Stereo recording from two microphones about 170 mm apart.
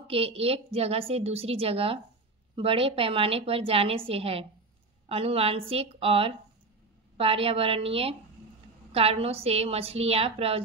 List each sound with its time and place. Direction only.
0.0 s a woman's voice: 35° right (ahead or behind)